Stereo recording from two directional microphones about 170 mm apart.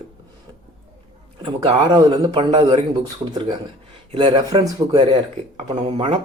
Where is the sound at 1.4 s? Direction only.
25° right (ahead or behind).